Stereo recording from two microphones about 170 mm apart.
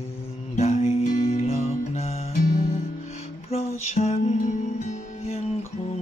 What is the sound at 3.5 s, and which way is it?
Music, 40° left (ahead or behind).